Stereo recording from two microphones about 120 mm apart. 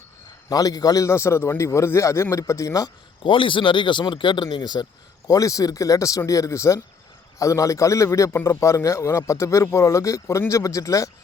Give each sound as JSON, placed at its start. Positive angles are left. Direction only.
{"t": 0.5, "sound": "a man's voice", "side_deg": 30}
{"t": 3.2, "sound": "a man's voice", "side_deg": 45}